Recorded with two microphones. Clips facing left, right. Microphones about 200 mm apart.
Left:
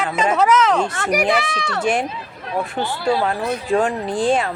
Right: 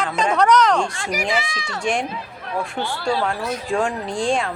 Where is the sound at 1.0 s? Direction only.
65° left (ahead or behind).